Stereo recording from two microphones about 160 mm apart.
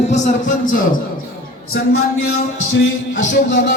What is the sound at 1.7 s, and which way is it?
Speech, 90° left.